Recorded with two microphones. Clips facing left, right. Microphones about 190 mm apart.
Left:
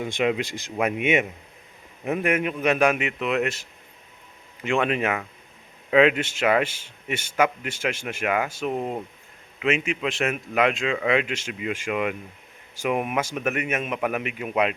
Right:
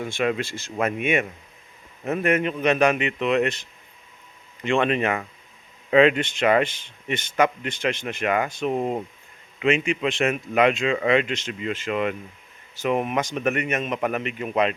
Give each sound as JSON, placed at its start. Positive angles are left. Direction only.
{"t": 0.0, "sound": "speech", "side_deg": 15}